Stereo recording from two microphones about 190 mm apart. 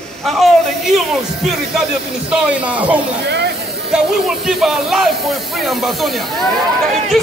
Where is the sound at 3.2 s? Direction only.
65° right (ahead or behind).